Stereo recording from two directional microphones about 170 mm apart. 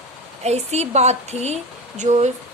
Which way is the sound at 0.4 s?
40° right (ahead or behind).